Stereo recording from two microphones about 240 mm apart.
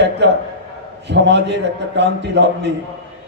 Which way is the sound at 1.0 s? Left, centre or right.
Right.